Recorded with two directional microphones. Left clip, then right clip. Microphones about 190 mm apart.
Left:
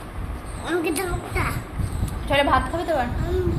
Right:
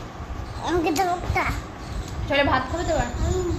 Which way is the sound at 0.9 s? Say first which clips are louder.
Right 4 dB; 40° right (ahead or behind).